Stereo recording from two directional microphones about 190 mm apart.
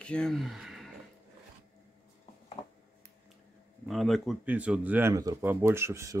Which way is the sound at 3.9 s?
Centre (ahead or behind).